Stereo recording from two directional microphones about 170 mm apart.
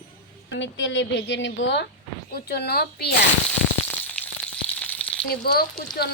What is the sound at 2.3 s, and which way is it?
Speech, 70° left (ahead or behind).